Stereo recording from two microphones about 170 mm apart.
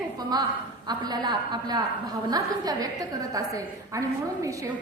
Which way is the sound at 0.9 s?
25° right (ahead or behind).